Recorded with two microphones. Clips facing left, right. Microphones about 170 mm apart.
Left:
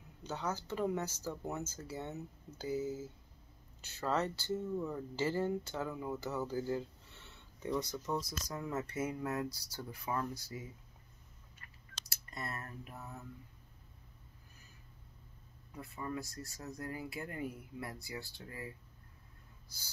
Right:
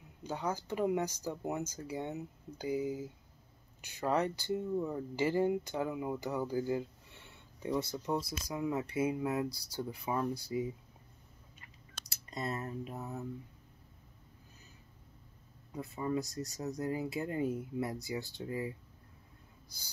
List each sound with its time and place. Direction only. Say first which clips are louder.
0.2 s speech: right 3 dB; 10° right (ahead or behind)
12.1 s speech: right 6 dB; 20° right (ahead or behind)
15.7 s speech: right 7 dB; 20° right (ahead or behind)